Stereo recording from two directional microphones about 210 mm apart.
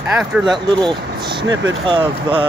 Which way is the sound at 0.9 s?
20° right (ahead or behind).